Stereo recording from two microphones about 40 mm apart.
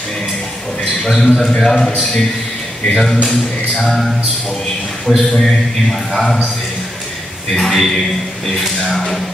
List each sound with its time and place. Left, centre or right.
1.0 s a man's voice: centre
2.9 s a man's voice: centre
7.5 s a man's voice: centre